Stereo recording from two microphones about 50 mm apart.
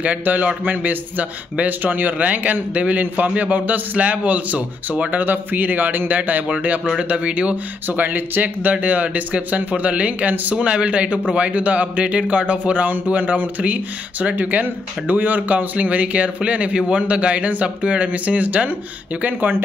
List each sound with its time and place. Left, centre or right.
0.0 s a man's voice: right
5.2 s a man's voice: right
7.0 s speech: right